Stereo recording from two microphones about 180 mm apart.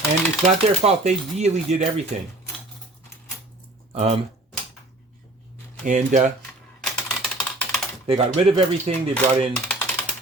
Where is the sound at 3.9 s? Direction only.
35° right (ahead or behind).